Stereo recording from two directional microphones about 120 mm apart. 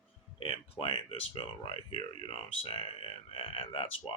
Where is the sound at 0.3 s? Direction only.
50° left (ahead or behind).